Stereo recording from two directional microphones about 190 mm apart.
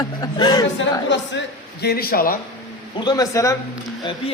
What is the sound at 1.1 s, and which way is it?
A man's voice, 65° left (ahead or behind).